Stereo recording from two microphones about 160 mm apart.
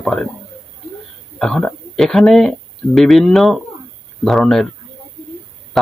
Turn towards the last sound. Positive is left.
turn(degrees=0)  # may be behind; listen again after turning